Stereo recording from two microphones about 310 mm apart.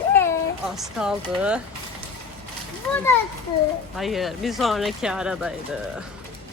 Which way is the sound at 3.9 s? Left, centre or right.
Centre.